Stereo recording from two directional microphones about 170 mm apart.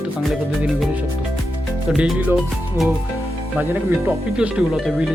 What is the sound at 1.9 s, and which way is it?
Speech, 5° right (ahead or behind).